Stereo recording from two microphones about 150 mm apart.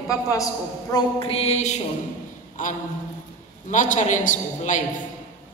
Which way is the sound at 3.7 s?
60° left (ahead or behind).